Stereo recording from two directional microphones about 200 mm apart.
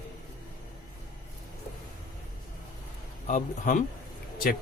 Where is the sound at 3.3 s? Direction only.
40° left (ahead or behind).